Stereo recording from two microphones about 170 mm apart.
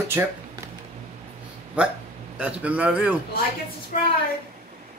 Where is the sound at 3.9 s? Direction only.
50° left (ahead or behind).